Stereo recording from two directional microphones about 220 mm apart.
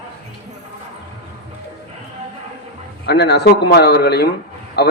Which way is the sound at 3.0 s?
50° left (ahead or behind).